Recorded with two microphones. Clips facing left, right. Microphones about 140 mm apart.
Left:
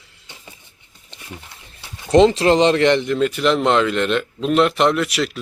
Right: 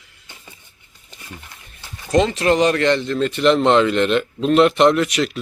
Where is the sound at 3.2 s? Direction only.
5° left (ahead or behind).